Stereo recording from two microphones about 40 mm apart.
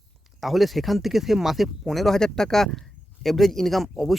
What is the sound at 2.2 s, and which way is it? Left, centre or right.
Speech, centre.